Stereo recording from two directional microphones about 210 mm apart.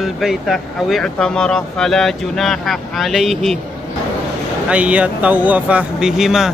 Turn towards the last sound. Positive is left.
turn(degrees=0)  # may be behind; listen again after turning